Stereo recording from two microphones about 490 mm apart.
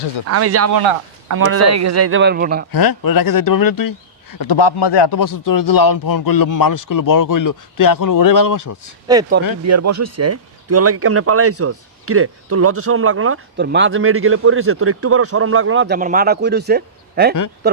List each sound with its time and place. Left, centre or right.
0.3 s speech: right
2.7 s speech: left
9.6 s speech: right